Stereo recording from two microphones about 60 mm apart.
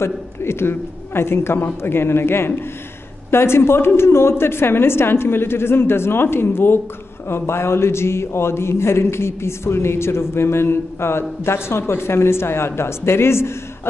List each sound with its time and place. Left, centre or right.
0.0 s a man's voice: left